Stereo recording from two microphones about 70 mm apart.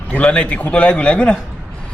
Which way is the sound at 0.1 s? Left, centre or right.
Centre.